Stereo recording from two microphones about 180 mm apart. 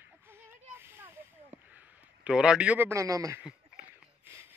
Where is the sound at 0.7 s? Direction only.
10° right (ahead or behind).